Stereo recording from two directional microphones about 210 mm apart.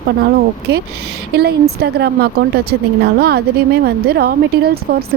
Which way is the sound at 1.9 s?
50° right (ahead or behind).